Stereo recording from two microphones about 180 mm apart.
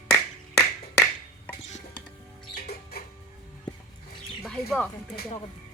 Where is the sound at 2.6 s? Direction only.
55° left (ahead or behind).